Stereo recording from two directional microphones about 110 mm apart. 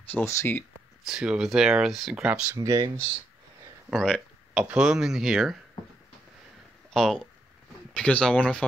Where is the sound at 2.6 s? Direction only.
35° right (ahead or behind).